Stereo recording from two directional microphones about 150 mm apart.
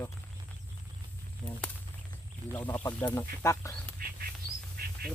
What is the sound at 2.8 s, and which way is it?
Speech, 25° left (ahead or behind).